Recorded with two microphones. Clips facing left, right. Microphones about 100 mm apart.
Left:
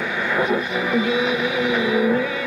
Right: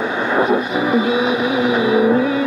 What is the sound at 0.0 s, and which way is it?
Vehicle, 25° right (ahead or behind).